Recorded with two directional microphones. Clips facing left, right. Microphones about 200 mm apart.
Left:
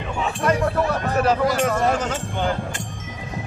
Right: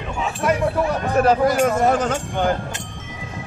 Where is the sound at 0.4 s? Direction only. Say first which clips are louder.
Right 1 dB; 10° right (ahead or behind).